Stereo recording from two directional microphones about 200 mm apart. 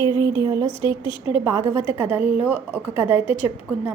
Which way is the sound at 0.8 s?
25° left (ahead or behind).